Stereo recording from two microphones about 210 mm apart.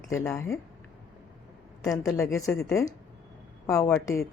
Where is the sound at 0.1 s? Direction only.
15° left (ahead or behind).